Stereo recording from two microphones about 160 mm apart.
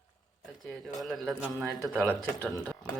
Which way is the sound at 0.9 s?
Centre (ahead or behind).